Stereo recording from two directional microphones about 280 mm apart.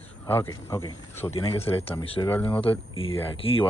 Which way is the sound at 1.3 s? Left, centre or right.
Left.